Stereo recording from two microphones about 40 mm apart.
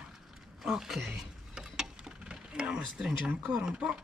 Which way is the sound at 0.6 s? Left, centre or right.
Centre.